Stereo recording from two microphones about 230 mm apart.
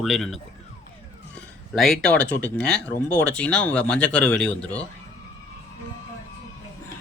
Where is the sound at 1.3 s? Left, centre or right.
Centre.